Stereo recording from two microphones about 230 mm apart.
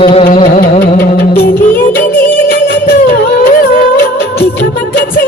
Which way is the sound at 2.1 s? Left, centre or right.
Centre.